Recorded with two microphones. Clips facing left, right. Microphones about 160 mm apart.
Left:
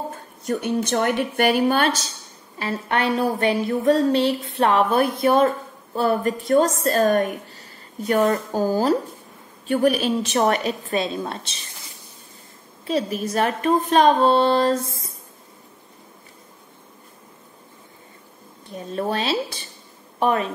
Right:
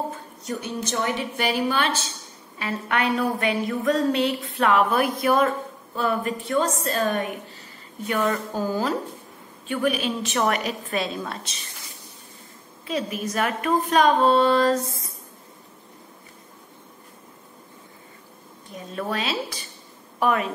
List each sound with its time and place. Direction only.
0.1 s a woman's voice: 55° left (ahead or behind)
2.6 s a woman's voice: 30° left (ahead or behind)
12.8 s a woman's voice: 35° left (ahead or behind)
18.9 s a woman's voice: 30° left (ahead or behind)